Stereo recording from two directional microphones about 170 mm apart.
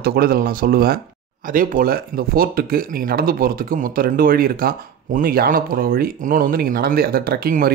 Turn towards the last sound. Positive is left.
turn(degrees=-60)  # may be behind; listen again after turning